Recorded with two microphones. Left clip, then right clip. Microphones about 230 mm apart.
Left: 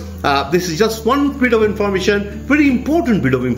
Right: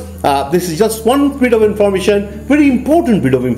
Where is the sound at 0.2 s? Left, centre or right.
Centre.